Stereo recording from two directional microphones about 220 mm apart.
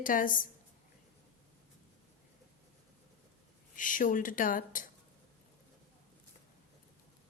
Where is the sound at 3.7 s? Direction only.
35° left (ahead or behind).